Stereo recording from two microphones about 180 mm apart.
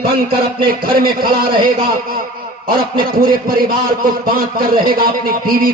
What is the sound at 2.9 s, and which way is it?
A man's voice, 55° right (ahead or behind).